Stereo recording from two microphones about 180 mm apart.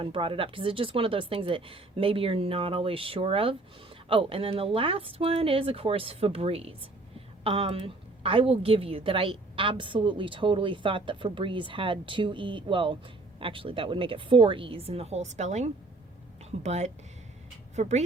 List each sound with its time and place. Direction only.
0.0 s a woman's voice: 30° right (ahead or behind)